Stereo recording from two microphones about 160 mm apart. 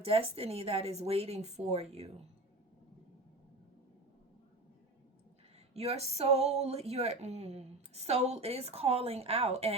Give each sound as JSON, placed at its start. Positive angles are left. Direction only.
{"t": 0.0, "sound": "speech", "side_deg": -35}
{"t": 5.7, "sound": "speech", "side_deg": -40}